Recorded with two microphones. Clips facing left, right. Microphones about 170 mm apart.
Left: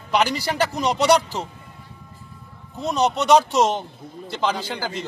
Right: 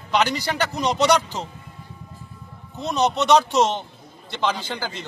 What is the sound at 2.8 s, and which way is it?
A man's voice, 10° left (ahead or behind).